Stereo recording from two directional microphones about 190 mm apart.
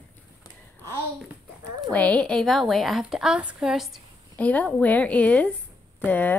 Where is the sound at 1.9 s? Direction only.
5° left (ahead or behind).